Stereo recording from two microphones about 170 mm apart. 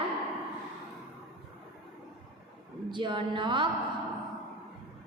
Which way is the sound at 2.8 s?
30° right (ahead or behind).